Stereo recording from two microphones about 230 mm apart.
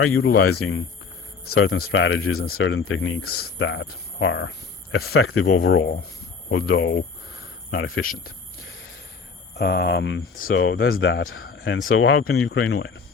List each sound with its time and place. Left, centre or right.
0.0 s speech: left
3.2 s speech: left
6.5 s speech: left
9.6 s speech: left
10.6 s speech: left